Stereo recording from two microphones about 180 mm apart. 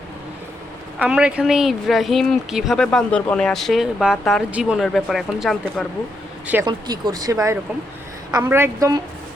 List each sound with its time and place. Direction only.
0.9 s speech: 5° right (ahead or behind)
6.7 s a woman's voice: 25° right (ahead or behind)